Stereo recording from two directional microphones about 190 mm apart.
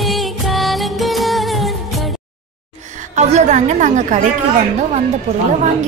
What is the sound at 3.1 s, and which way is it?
A woman's voice, 35° right (ahead or behind).